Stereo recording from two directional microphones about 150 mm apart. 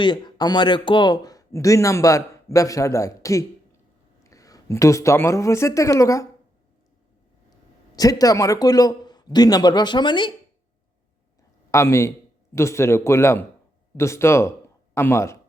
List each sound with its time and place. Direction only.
0.0 s a man's voice: 30° left (ahead or behind)
7.9 s speech: 25° left (ahead or behind)
11.7 s a man's voice: 20° left (ahead or behind)